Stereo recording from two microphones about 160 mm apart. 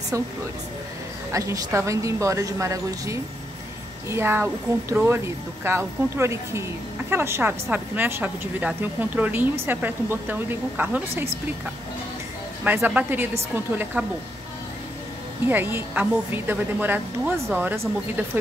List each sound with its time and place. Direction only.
1.3 s a woman's voice: 20° right (ahead or behind)
12.6 s a woman's voice: 10° right (ahead or behind)
15.4 s a woman's voice: 10° right (ahead or behind)